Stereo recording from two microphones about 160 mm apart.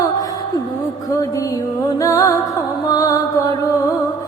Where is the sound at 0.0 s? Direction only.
25° left (ahead or behind).